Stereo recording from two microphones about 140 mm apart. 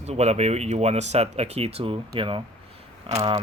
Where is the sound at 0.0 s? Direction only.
50° right (ahead or behind).